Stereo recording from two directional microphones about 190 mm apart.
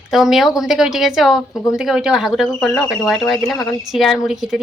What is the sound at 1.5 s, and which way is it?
Speech, 15° left (ahead or behind).